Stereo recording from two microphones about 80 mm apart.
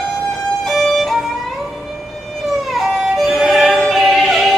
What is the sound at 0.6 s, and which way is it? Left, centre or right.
Violin, centre.